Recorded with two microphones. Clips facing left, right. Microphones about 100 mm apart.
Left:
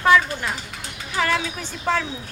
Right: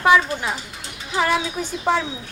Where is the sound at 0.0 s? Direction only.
15° right (ahead or behind).